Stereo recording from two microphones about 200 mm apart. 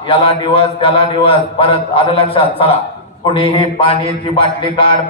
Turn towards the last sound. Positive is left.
turn(degrees=25)  # may be behind; listen again after turning